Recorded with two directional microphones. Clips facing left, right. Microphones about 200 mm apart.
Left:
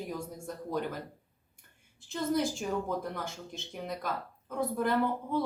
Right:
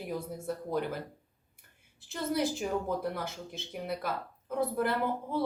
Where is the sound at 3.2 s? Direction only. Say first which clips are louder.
Right 1 dB; 5° right (ahead or behind).